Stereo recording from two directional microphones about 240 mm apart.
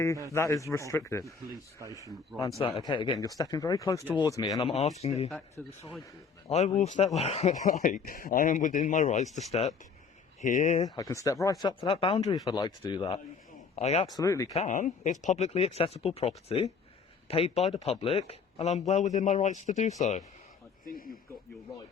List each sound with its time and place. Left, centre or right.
0.3 s speech: centre
1.8 s speech: centre
2.6 s speech: left
5.6 s speech: centre
6.5 s speech: left
10.9 s speech: centre
14.5 s speech: left